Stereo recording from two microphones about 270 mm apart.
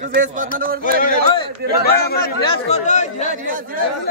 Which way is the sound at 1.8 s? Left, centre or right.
Left.